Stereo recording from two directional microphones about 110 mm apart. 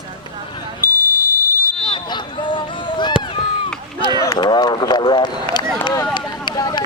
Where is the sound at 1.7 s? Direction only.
50° left (ahead or behind).